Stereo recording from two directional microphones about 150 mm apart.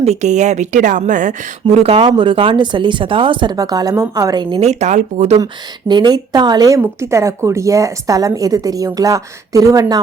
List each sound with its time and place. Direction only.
0.0 s a woman's voice: 50° right (ahead or behind)
1.6 s speech: 40° right (ahead or behind)
4.5 s a woman's voice: 45° right (ahead or behind)
5.9 s speech: 30° right (ahead or behind)